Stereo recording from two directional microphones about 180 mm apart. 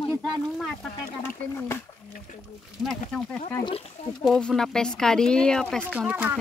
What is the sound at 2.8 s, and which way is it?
Speech, centre (ahead or behind).